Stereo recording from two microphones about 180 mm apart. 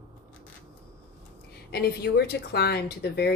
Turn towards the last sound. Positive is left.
turn(degrees=65)  # may be behind; listen again after turning